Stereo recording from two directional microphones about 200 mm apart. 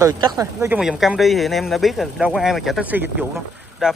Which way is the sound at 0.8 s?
Centre (ahead or behind).